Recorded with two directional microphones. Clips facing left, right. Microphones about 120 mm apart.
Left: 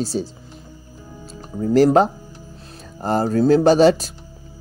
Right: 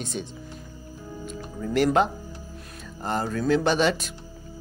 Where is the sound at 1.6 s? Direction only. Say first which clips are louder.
Left 7 dB; 35° left (ahead or behind).